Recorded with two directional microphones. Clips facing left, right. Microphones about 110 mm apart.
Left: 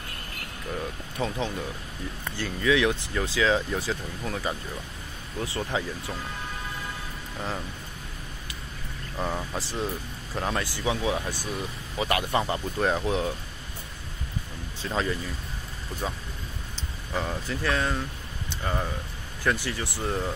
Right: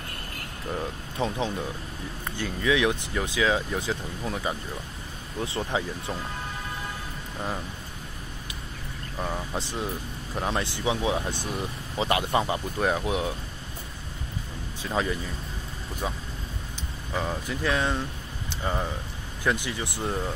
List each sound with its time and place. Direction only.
0.7 s speech: 20° right (ahead or behind)
7.3 s speech: 15° right (ahead or behind)
9.5 s speech: 15° right (ahead or behind)
14.8 s speech: 15° right (ahead or behind)
17.2 s speech: 15° right (ahead or behind)